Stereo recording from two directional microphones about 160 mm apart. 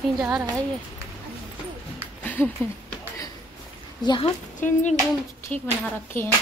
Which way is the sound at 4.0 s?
25° left (ahead or behind).